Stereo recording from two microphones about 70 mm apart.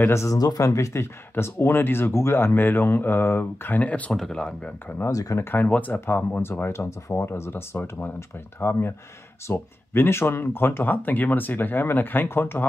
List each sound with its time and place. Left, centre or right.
0.1 s speech: left
0.4 s speech: left
1.3 s speech: left
4.1 s speech: centre
5.1 s speech: left
5.4 s speech: left